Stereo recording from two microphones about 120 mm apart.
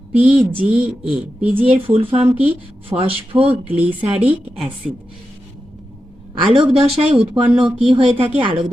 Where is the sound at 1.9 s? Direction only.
50° right (ahead or behind).